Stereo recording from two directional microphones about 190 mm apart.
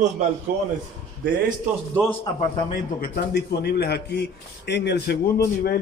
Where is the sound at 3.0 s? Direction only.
50° left (ahead or behind).